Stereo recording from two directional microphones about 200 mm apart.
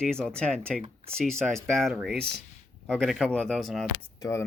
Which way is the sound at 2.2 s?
50° right (ahead or behind).